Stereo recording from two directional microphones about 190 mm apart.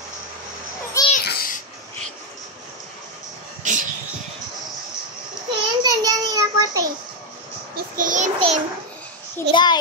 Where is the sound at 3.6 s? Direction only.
40° right (ahead or behind).